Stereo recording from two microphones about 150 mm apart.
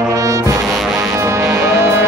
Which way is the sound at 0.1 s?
20° right (ahead or behind).